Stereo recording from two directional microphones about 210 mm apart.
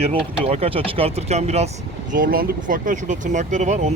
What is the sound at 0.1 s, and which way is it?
Speech, 30° right (ahead or behind).